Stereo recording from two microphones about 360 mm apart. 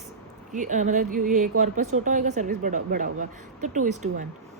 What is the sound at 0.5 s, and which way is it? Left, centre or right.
Speech, right.